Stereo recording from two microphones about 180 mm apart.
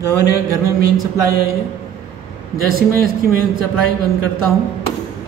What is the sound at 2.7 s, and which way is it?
Speech, 55° right (ahead or behind).